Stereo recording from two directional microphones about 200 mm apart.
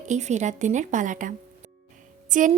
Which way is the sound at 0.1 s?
35° right (ahead or behind).